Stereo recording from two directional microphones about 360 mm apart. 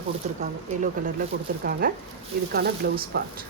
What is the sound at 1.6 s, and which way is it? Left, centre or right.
A woman's voice, right.